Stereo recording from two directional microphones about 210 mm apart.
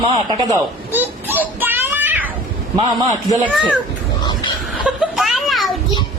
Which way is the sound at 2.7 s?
20° right (ahead or behind).